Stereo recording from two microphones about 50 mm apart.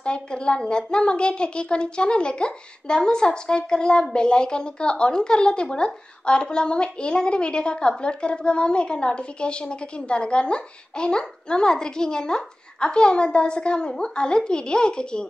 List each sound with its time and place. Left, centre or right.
0.0 s a woman's voice: centre